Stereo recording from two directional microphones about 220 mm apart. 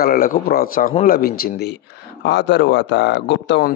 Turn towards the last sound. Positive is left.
turn(degrees=50)  # may be behind; listen again after turning